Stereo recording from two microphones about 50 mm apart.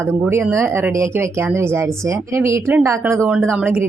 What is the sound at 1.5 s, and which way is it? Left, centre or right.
Speech, right.